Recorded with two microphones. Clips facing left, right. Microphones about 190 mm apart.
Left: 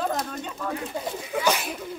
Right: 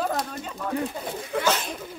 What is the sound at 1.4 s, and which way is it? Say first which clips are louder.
Speech: left 1 dB; 10° left (ahead or behind).